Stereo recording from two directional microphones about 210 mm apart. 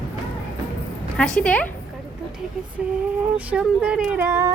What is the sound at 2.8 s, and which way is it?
A woman's voice, 5° right (ahead or behind).